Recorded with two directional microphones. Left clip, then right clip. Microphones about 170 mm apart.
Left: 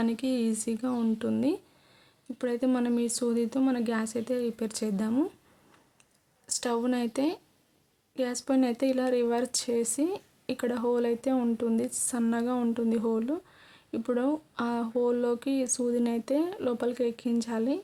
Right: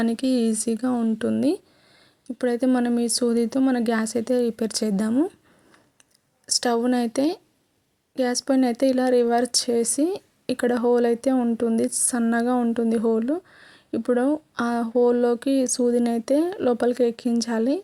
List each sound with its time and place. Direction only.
0.0 s speech: 30° right (ahead or behind)
6.5 s speech: 30° right (ahead or behind)